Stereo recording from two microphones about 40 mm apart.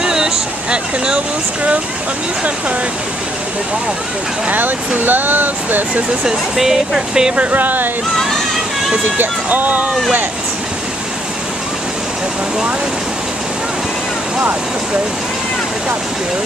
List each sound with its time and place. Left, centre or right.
0.0 s a sound: centre
0.7 s speech: right
4.5 s speech: right
6.2 s speech: centre
7.5 s speech: right
9.2 s speech: right